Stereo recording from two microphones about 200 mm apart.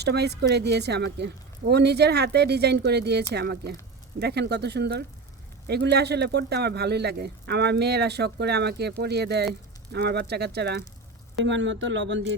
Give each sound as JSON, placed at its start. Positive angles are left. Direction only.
{"t": 0.0, "sound": "a man's voice", "side_deg": -55}
{"t": 11.4, "sound": "speech", "side_deg": -65}